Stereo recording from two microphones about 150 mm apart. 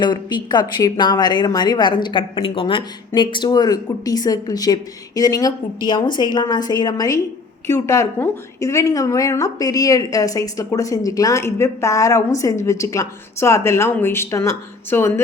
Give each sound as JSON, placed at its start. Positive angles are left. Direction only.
{"t": 0.0, "sound": "a woman's voice", "side_deg": 30}